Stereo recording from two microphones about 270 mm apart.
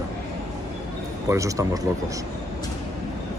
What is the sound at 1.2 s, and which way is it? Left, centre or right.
Speech, centre.